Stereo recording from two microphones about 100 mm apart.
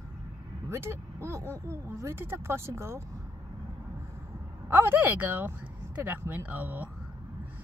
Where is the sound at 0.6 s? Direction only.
25° right (ahead or behind).